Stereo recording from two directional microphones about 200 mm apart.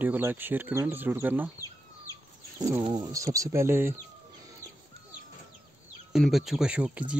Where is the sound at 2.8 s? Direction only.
20° right (ahead or behind).